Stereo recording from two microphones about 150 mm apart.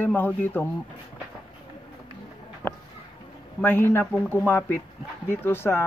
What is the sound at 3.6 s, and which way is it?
Speech, 15° left (ahead or behind).